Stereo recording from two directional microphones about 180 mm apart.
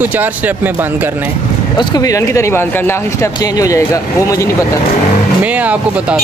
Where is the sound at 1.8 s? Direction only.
20° left (ahead or behind).